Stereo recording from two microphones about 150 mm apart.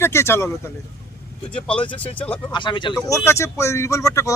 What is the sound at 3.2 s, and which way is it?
Speech, 20° left (ahead or behind).